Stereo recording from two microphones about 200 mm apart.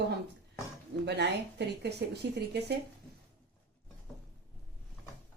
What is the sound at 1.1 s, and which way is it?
Speech, 60° right (ahead or behind).